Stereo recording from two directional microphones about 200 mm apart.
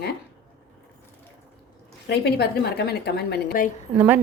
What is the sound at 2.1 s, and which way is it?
Speech, 55° left (ahead or behind).